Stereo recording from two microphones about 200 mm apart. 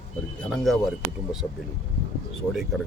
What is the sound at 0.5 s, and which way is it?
Speech, centre (ahead or behind).